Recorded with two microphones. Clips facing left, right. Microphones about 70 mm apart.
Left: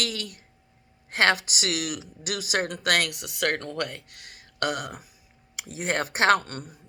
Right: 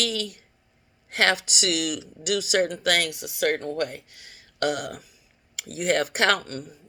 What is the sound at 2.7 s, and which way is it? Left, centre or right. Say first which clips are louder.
A man's voice: right 1 dB; left.